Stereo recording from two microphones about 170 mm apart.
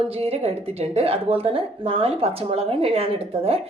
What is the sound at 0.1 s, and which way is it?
A woman's voice, 35° right (ahead or behind).